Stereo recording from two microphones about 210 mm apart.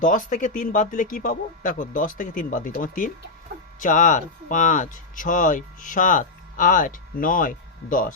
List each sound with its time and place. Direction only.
0.0 s speech: 40° left (ahead or behind)